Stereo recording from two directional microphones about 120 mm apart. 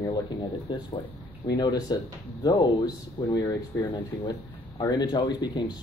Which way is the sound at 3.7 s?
20° left (ahead or behind).